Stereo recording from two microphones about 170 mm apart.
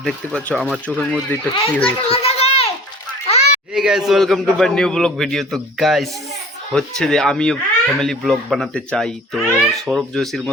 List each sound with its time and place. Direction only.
0.0 s speech: 5° left (ahead or behind)
1.8 s children playing: 35° left (ahead or behind)
3.2 s a sound: 40° left (ahead or behind)
3.8 s speech: centre (ahead or behind)